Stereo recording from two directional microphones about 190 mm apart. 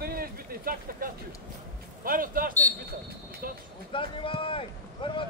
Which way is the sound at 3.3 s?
50° right (ahead or behind).